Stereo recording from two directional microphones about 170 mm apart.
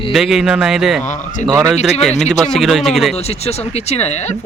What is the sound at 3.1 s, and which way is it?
Speech, 40° left (ahead or behind).